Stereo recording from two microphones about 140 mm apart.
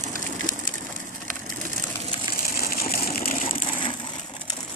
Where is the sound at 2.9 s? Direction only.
85° left.